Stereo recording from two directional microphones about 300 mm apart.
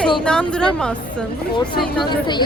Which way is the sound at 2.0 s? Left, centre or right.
Centre.